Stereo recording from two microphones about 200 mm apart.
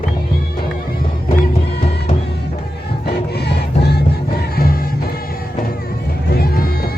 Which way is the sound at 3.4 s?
55° left (ahead or behind).